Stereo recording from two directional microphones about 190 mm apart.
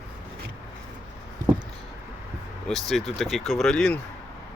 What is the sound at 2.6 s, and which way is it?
Speech, centre (ahead or behind).